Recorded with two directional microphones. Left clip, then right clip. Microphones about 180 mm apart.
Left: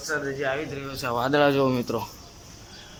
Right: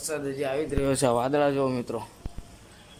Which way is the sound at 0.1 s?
25° right (ahead or behind).